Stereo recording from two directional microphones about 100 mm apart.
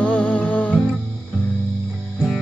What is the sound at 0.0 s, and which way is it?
Music, 10° left (ahead or behind).